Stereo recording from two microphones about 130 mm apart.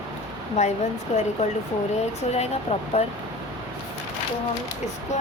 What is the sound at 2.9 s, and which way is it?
Speech, 50° left (ahead or behind).